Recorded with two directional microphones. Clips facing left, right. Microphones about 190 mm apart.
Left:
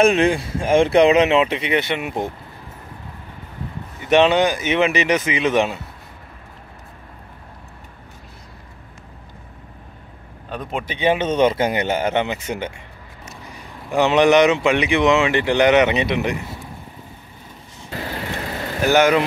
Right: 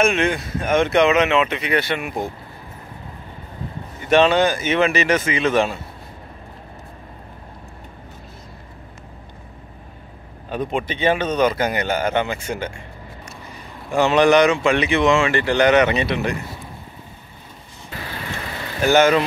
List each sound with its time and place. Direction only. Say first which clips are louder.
0.0 s speech: left 3 dB; 35° left (ahead or behind)
4.1 s speech: even; 15° left (ahead or behind)
10.5 s speech: right 4 dB; centre (ahead or behind)
10.9 s speech: left 3 dB; 15° left (ahead or behind)
13.9 s speech: even; 20° left (ahead or behind)
18.9 s speech: even; 10° left (ahead or behind)